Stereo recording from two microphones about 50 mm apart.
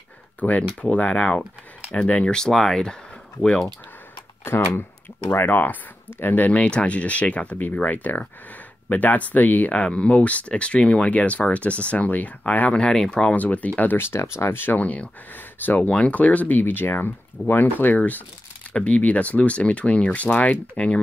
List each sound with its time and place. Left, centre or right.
0.4 s speech: left; by 3.0 s centre
4.5 s speech: left
6.5 s speech: left
9.8 s speech: left
12.8 s speech: centre
13.4 s speech: left
13.9 s speech: left
14.8 s speech: left
15.9 s speech: left